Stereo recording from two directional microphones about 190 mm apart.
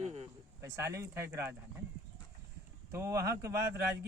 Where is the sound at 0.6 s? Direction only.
15° right (ahead or behind).